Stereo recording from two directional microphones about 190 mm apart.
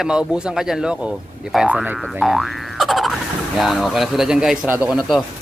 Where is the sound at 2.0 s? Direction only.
Centre (ahead or behind).